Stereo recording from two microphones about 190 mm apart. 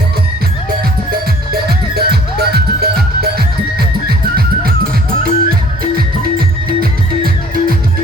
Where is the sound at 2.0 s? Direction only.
55° right (ahead or behind).